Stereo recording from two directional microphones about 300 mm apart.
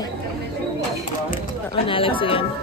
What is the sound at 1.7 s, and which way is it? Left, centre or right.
Speech, centre.